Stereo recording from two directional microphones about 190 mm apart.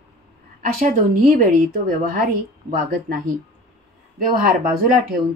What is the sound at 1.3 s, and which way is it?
Speech, 45° right (ahead or behind).